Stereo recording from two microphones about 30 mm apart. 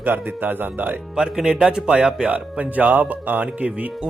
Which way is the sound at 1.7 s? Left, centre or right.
Right.